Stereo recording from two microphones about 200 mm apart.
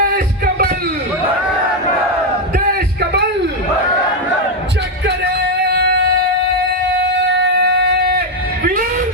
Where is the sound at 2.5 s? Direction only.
55° right (ahead or behind).